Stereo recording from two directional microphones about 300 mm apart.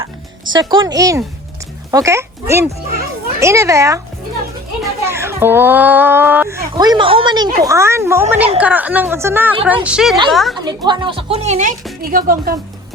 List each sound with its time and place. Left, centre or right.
0.5 s a child's voice: centre
10.6 s a child's voice: centre; by 12.5 s right